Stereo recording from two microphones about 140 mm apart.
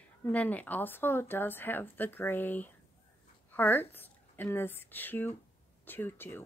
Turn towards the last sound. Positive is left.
turn(degrees=15)  # may be behind; listen again after turning